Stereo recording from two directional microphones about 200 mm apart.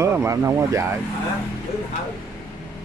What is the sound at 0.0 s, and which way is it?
Speech, 15° right (ahead or behind).